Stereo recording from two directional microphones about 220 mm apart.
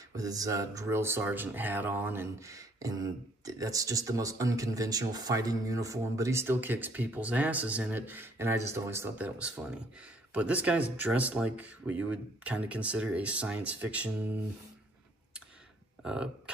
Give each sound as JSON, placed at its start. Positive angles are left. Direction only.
{"t": 0.1, "sound": "speech", "side_deg": -15}
{"t": 16.0, "sound": "speech", "side_deg": -5}